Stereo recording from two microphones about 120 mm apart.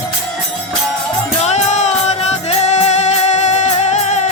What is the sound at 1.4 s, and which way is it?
Music, 70° left (ahead or behind).